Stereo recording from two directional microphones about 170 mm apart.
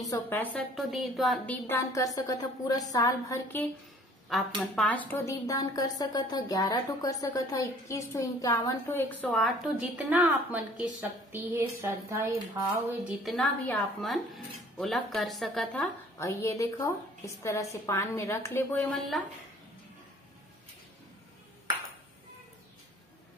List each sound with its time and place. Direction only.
0.3 s a woman's voice: 10° left (ahead or behind)
0.7 s a woman's voice: centre (ahead or behind); by 3.6 s 20° left (ahead or behind)
4.3 s a woman's voice: centre (ahead or behind)
13.2 s a woman's voice: 5° left (ahead or behind)